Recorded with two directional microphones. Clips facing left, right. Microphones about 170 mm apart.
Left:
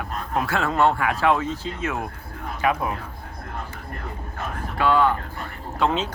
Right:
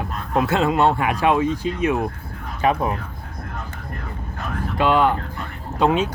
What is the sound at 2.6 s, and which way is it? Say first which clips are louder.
Speech: right 3 dB; 30° right (ahead or behind).